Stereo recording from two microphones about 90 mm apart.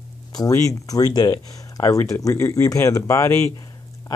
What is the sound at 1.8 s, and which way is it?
Speech, 35° left (ahead or behind).